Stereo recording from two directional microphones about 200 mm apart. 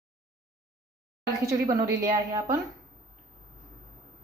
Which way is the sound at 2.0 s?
15° right (ahead or behind).